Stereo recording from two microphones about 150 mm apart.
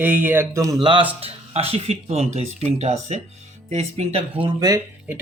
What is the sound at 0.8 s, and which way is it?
Speech, 35° right (ahead or behind).